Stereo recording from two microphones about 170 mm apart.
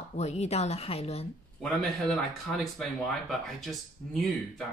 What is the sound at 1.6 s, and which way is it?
Speech, centre (ahead or behind).